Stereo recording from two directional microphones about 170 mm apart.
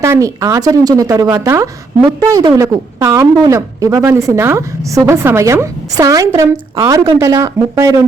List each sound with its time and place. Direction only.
0.0 s a woman's voice: 15° right (ahead or behind)